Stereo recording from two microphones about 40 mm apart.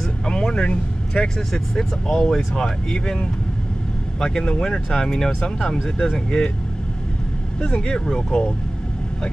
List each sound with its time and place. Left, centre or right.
0.3 s vehicle: left
0.7 s speech: left
1.5 s speech: centre
4.2 s speech: centre
7.8 s speech: centre